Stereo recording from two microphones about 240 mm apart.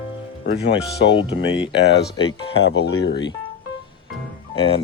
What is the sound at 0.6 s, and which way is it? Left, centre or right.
Speech, left.